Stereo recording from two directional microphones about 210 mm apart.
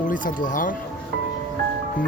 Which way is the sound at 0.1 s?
40° left (ahead or behind).